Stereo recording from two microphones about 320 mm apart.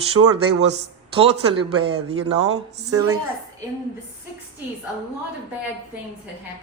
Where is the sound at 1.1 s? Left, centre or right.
Centre.